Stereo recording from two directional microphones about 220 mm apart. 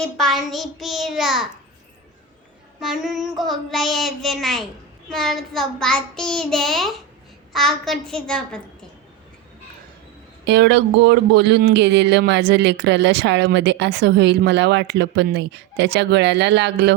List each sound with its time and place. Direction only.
0.0 s child singing: centre (ahead or behind)
2.8 s child singing: centre (ahead or behind)
10.4 s speech: 50° right (ahead or behind)